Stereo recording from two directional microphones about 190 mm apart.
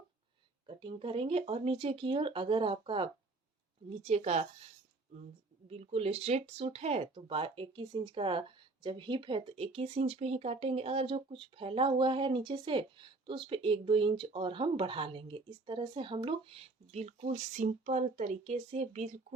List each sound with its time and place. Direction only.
0.7 s a woman's voice: 25° right (ahead or behind)
5.6 s speech: 30° right (ahead or behind)